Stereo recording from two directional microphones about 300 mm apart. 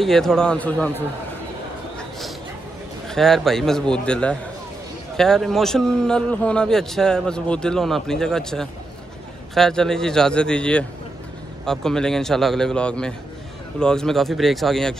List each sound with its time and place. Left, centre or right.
0.0 s a man's voice: centre
2.0 s a sound: centre
3.1 s a man's voice: centre